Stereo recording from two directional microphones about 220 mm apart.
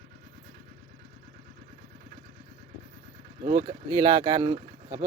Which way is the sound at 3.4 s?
25° right (ahead or behind).